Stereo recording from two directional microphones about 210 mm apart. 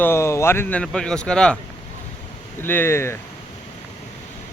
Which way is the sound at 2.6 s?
10° left (ahead or behind).